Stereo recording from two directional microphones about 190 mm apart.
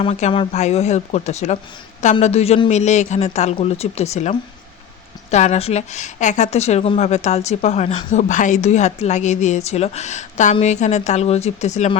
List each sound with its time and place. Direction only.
0.0 s a woman's voice: 35° left (ahead or behind)